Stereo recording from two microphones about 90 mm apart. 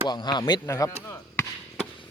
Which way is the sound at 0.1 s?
55° left (ahead or behind).